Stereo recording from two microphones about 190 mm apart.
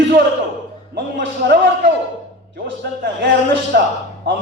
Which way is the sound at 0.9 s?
60° right (ahead or behind).